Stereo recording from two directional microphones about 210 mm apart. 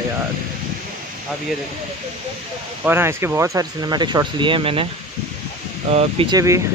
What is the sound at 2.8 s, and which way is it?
Speech, 10° right (ahead or behind).